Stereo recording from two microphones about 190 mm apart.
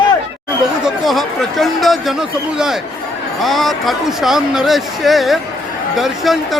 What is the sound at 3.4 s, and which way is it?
Speech, centre (ahead or behind).